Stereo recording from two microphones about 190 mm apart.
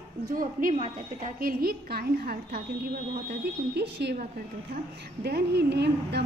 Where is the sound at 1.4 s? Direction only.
50° right (ahead or behind).